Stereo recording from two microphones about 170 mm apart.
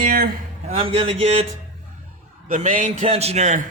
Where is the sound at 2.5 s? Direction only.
45° right (ahead or behind).